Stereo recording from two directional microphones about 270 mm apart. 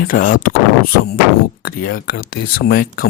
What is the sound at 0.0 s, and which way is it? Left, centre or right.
Speech, left.